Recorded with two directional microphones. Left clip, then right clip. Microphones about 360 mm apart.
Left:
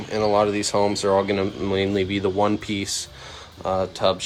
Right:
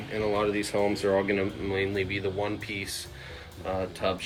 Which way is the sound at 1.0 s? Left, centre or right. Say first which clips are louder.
Left 5 dB; centre.